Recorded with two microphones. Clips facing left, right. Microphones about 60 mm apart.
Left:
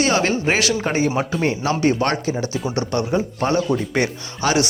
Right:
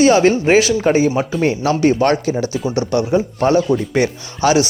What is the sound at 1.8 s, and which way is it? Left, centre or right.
Speech, centre.